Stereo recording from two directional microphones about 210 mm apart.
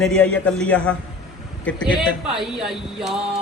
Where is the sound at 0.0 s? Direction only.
5° left (ahead or behind).